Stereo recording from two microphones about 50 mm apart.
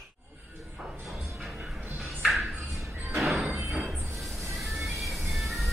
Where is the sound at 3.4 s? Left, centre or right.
Right.